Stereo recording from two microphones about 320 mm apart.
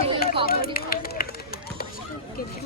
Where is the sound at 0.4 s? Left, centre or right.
Left.